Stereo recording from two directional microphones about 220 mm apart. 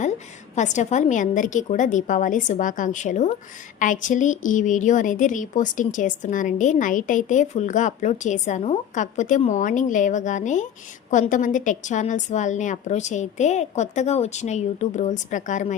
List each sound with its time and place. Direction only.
0.5 s a woman's voice: 35° left (ahead or behind)